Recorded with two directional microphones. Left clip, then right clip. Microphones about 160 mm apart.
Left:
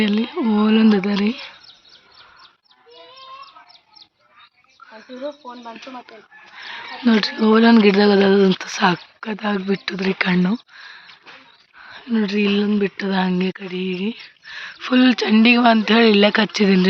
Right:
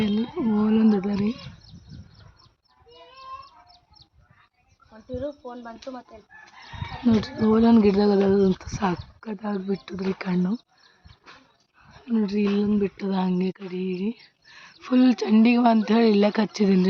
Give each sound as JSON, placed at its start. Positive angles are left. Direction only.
{"t": 0.0, "sound": "a sound", "side_deg": 5}
{"t": 0.3, "sound": "a sound", "side_deg": 30}
{"t": 1.1, "sound": "speech", "side_deg": 15}
{"t": 5.2, "sound": "speech", "side_deg": -65}
{"t": 7.0, "sound": "speech", "side_deg": 0}
{"t": 9.8, "sound": "speech", "side_deg": 5}